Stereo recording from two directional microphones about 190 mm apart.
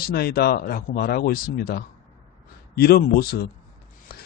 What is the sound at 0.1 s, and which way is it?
A man's voice, 55° left (ahead or behind).